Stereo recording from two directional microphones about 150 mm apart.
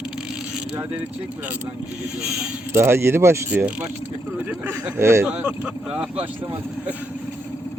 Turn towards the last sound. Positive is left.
turn(degrees=-10)  # may be behind; listen again after turning